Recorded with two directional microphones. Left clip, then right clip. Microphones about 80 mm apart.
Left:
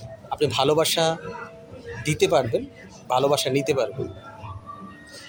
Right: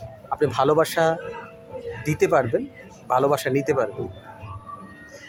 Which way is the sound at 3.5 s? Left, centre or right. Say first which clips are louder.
Right 1 dB; left.